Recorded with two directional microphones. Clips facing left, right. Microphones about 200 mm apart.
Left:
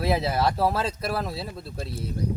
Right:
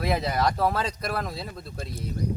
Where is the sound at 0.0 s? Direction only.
5° left (ahead or behind).